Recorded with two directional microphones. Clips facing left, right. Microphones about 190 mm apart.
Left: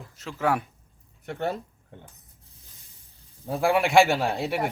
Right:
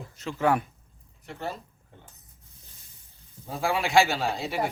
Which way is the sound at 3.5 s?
60° left (ahead or behind).